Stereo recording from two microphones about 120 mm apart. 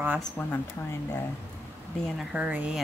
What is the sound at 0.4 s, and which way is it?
Speech, 20° left (ahead or behind).